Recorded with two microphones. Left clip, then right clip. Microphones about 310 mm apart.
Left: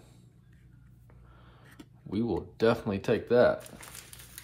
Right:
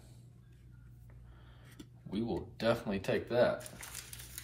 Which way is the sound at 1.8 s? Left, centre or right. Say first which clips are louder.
Left 6 dB; centre.